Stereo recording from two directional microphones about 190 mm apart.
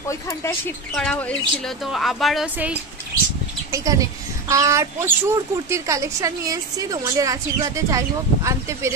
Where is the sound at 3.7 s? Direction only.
15° right (ahead or behind).